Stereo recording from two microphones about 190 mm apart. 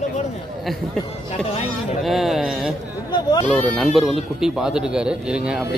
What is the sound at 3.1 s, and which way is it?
Speech, 20° left (ahead or behind).